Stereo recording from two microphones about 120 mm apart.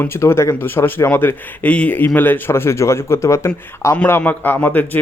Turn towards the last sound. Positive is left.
turn(degrees=15)  # may be behind; listen again after turning